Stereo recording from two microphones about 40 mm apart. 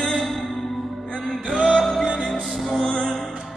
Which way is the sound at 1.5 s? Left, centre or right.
Centre.